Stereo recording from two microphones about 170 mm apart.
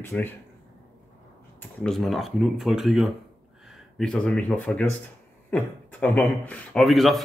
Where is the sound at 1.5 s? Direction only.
5° left (ahead or behind).